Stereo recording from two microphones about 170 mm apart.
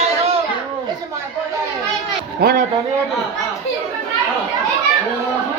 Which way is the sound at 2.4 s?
65° right (ahead or behind).